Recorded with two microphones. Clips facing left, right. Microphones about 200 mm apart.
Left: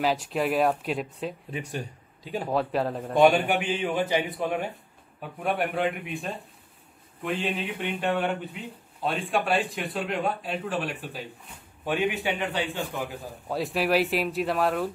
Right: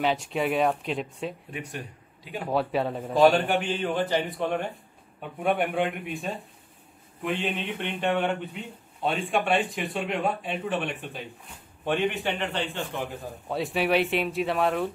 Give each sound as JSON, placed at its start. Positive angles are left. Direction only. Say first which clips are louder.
{"t": 0.0, "sound": "speech", "louder": "even", "side_deg": 0}
{"t": 1.5, "sound": "speech", "louder": "left 3 dB", "side_deg": 30}
{"t": 2.4, "sound": "a man's voice", "louder": "right 1 dB", "side_deg": 0}